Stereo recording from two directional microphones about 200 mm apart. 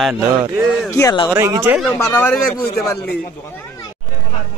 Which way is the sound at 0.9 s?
15° left (ahead or behind).